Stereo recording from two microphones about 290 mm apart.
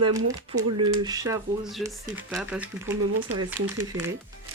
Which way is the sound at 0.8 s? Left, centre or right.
Centre.